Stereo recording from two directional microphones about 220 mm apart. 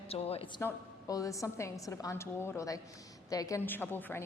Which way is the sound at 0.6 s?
15° left (ahead or behind).